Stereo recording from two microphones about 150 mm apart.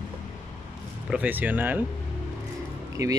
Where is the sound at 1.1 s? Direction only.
10° right (ahead or behind).